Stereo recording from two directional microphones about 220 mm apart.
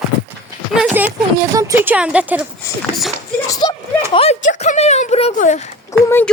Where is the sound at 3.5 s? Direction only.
20° left (ahead or behind).